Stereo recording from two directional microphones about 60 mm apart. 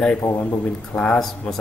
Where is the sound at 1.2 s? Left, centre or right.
Centre.